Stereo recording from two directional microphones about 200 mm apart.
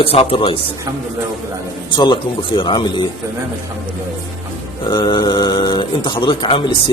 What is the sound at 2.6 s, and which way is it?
Speech, 25° left (ahead or behind).